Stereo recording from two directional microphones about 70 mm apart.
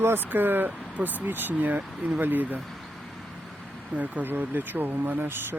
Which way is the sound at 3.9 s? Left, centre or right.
Right.